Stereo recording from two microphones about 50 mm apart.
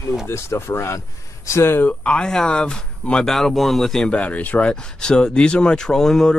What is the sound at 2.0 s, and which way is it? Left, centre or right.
Speech, centre.